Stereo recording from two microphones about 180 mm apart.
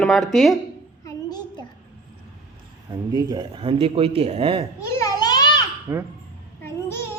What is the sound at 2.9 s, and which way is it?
Speech, 20° right (ahead or behind).